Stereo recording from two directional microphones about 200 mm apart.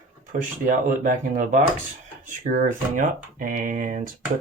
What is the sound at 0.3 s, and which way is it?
Speech, 40° right (ahead or behind).